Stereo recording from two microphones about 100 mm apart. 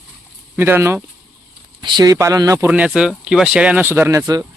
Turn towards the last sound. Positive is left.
turn(degrees=-35)  # may be behind; listen again after turning